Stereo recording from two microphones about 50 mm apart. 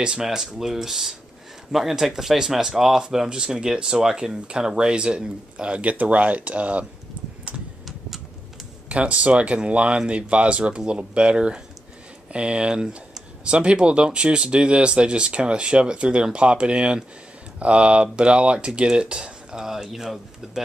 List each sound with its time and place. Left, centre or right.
0.0 s speech: centre
7.2 s a sound: right
8.8 s speech: right; by 20.6 s centre